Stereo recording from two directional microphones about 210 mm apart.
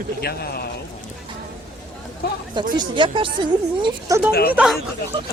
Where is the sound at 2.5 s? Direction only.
20° right (ahead or behind).